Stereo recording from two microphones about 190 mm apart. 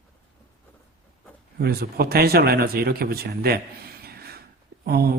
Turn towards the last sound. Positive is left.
turn(degrees=-55)  # may be behind; listen again after turning